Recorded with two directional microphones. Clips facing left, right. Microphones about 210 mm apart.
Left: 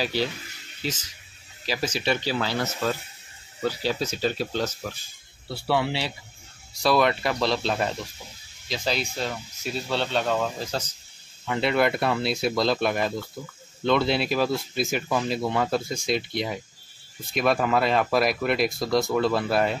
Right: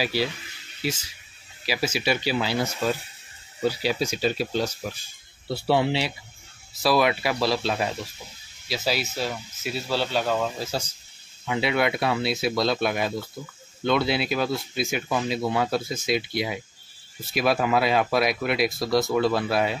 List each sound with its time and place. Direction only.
0.0 s speech: 10° right (ahead or behind)
1.7 s speech: 10° right (ahead or behind)
5.5 s speech: 25° right (ahead or behind)
6.7 s speech: 5° right (ahead or behind)